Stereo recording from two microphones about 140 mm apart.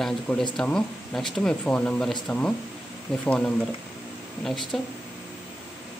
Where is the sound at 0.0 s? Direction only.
Centre (ahead or behind).